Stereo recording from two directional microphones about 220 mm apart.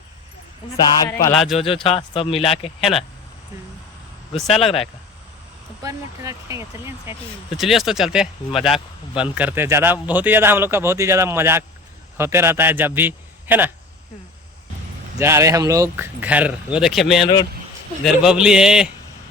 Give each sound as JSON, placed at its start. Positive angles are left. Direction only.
{"t": 0.9, "sound": "a sound", "side_deg": 15}
{"t": 1.3, "sound": "speech", "side_deg": 0}
{"t": 1.5, "sound": "speech", "side_deg": 25}
{"t": 4.5, "sound": "speech", "side_deg": 25}
{"t": 5.8, "sound": "a man's voice", "side_deg": -15}
{"t": 7.5, "sound": "a man's voice", "side_deg": 0}
{"t": 15.2, "sound": "a man's voice", "side_deg": -10}